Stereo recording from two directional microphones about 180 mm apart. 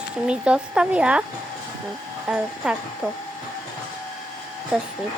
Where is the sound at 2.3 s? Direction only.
5° right (ahead or behind).